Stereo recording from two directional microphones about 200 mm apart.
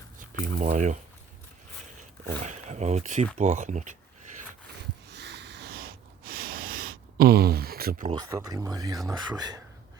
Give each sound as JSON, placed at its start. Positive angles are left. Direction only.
{"t": 0.2, "sound": "speech", "side_deg": -40}
{"t": 2.4, "sound": "speech", "side_deg": -35}
{"t": 5.1, "sound": "snort", "side_deg": -55}
{"t": 8.1, "sound": "speech", "side_deg": -20}